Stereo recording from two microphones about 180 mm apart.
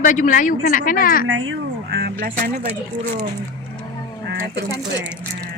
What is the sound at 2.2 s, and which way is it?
Speech, 50° right (ahead or behind).